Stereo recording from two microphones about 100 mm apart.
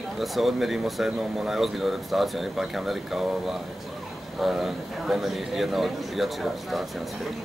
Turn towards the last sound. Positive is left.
turn(degrees=0)  # may be behind; listen again after turning